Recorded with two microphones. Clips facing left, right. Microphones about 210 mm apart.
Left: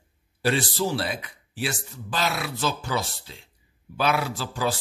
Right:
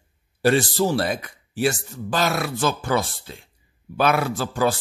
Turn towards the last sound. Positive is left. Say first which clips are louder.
# right 6 dB
turn(degrees=-50)  # may be behind; listen again after turning